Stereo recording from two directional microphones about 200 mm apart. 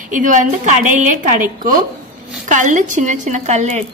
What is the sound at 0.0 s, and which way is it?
A woman's voice, 40° right (ahead or behind).